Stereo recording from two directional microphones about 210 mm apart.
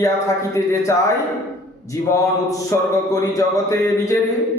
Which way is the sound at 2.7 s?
15° left (ahead or behind).